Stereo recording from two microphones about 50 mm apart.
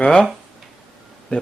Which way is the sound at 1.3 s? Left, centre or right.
Left.